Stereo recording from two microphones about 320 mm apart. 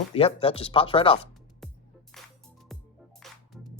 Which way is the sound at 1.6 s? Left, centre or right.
Centre.